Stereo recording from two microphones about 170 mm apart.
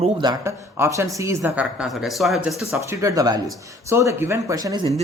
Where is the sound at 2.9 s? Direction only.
20° right (ahead or behind).